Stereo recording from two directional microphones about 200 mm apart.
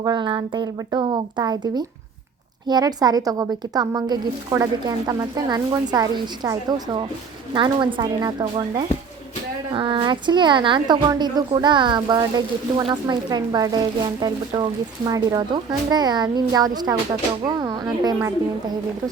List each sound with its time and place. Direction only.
0.0 s a woman's voice: 20° right (ahead or behind)